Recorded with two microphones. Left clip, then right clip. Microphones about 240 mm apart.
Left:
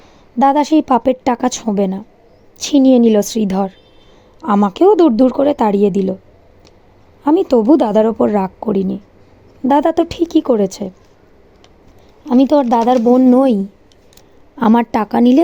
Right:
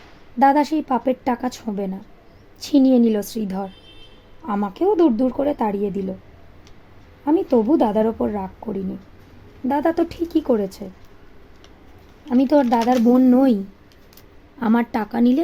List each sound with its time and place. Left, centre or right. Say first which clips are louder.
0.3 s a woman's voice: left 5 dB; left
7.3 s a woman's voice: left 7 dB; left
12.3 s a woman's voice: left 5 dB; left
14.6 s a woman's voice: left 8 dB; left